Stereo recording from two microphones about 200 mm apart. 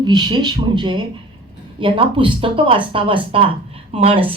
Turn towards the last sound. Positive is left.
turn(degrees=-30)  # may be behind; listen again after turning